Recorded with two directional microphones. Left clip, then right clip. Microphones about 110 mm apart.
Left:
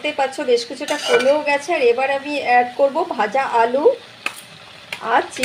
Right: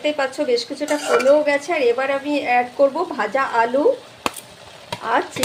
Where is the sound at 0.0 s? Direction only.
20° left (ahead or behind).